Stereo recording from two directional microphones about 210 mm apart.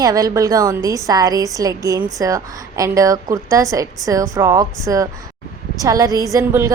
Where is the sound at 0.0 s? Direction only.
15° right (ahead or behind).